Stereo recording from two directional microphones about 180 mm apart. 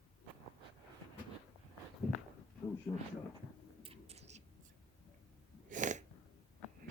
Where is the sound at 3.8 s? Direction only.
35° right (ahead or behind).